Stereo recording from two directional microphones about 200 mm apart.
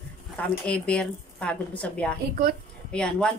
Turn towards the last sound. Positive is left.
turn(degrees=5)  # may be behind; listen again after turning